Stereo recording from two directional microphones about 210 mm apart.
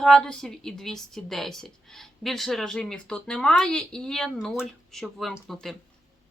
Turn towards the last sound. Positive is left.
turn(degrees=0)  # may be behind; listen again after turning